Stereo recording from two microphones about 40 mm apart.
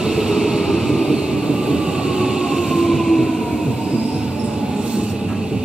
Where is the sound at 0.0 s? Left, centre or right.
Centre.